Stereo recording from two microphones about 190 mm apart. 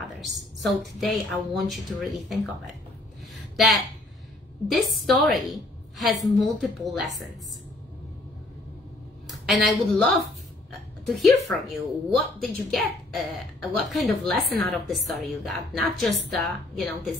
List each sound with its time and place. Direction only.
0.6 s a woman's voice: centre (ahead or behind)
3.5 s a woman's voice: centre (ahead or behind)
9.3 s a woman's voice: centre (ahead or behind)